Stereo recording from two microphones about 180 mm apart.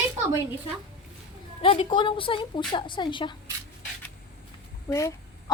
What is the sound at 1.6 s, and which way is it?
A woman's voice, 30° left (ahead or behind).